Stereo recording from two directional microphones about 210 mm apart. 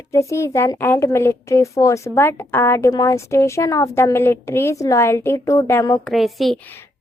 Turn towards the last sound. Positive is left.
turn(degrees=0)  # may be behind; listen again after turning